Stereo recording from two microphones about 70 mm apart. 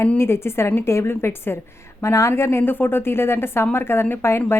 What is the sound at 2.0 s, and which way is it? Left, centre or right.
A woman's voice, left.